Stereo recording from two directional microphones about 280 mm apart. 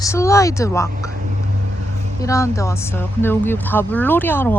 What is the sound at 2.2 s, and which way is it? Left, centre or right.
Speech, centre.